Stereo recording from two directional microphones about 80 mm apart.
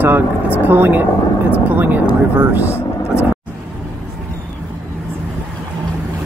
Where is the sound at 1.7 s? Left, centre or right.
Right.